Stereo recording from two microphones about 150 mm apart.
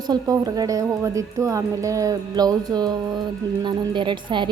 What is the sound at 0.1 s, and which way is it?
A woman's voice, 25° right (ahead or behind).